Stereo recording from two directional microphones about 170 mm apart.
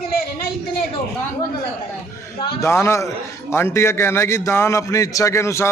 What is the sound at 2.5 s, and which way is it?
A man's voice, 15° left (ahead or behind).